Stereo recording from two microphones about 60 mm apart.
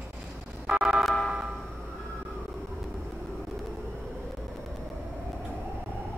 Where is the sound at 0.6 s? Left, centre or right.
Centre.